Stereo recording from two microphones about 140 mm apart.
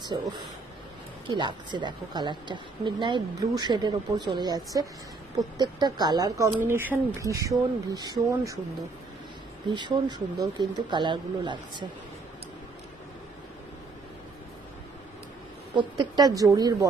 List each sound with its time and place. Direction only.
0.0 s speech: 30° right (ahead or behind)
1.3 s a woman's voice: 35° right (ahead or behind)
9.7 s a woman's voice: 35° right (ahead or behind)
15.7 s speech: 35° right (ahead or behind)